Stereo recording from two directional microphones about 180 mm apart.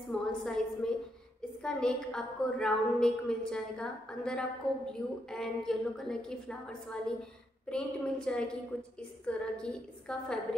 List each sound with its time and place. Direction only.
0.1 s a woman's voice: 5° left (ahead or behind)